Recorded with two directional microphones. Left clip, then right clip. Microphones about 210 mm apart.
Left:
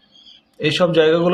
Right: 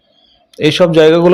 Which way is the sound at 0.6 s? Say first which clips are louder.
Right 7 dB; 35° right (ahead or behind).